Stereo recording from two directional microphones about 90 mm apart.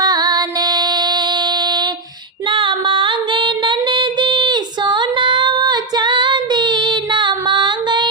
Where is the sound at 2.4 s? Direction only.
70° right (ahead or behind).